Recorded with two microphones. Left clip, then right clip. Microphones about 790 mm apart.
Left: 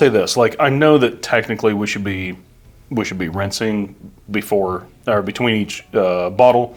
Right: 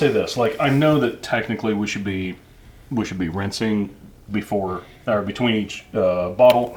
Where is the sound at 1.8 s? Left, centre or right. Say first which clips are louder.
Left 4 dB; left.